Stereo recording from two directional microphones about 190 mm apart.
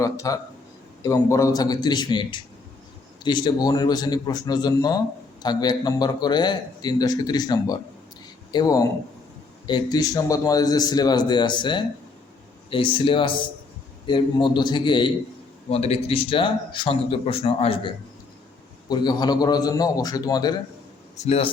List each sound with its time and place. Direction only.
0.0 s a man's voice: 15° left (ahead or behind)
21.2 s a man's voice: 30° left (ahead or behind)